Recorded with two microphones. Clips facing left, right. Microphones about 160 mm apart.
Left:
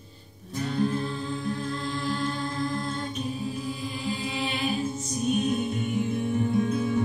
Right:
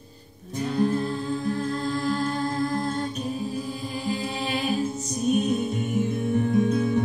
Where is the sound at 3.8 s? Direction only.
40° right (ahead or behind).